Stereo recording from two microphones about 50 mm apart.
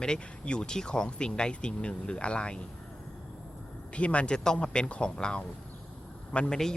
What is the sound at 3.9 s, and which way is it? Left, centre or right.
Speech, left.